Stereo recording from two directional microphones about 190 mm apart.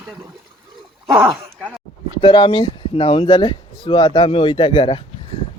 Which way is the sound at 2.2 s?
25° left (ahead or behind).